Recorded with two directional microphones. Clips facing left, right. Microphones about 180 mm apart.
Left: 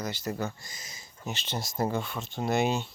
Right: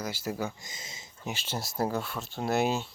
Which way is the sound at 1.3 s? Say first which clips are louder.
Left 1 dB; 5° right (ahead or behind).